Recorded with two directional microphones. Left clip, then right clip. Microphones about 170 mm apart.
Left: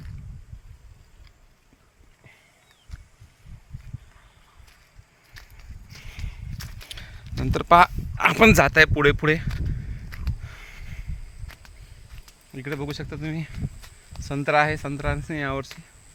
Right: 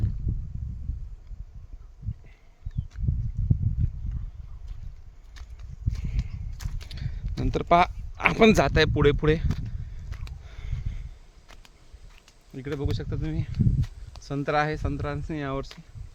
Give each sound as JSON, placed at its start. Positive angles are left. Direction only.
{"t": 6.1, "sound": "horse", "side_deg": 15}
{"t": 6.7, "sound": "walk", "side_deg": 5}
{"t": 7.3, "sound": "speech", "side_deg": 0}
{"t": 10.4, "sound": "a sound", "side_deg": 0}
{"t": 12.1, "sound": "a sound", "side_deg": 10}
{"t": 14.2, "sound": "speech", "side_deg": 15}